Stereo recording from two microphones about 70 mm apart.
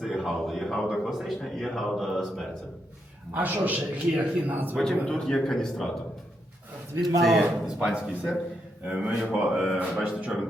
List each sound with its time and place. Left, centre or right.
0.0 s a man's voice: centre
3.3 s a man's voice: right
5.0 s a man's voice: centre
7.2 s a man's voice: centre
9.9 s speech: centre